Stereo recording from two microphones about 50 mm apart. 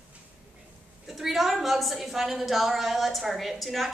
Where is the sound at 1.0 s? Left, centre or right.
Centre.